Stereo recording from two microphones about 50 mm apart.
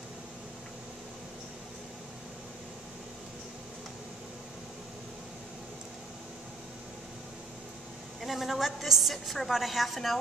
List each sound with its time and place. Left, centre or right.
8.2 s a woman's voice: centre